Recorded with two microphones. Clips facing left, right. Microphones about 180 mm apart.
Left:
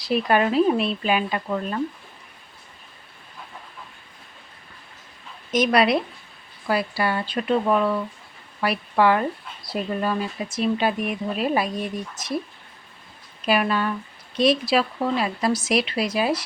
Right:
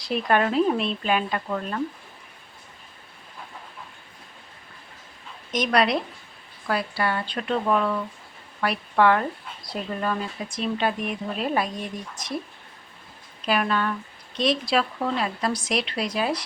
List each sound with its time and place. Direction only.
0.0 s speech: 5° left (ahead or behind)
5.5 s speech: 5° left (ahead or behind)
13.4 s speech: 10° left (ahead or behind)